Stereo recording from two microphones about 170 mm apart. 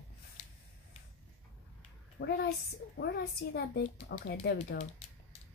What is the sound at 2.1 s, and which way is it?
A woman's voice, 75° left (ahead or behind).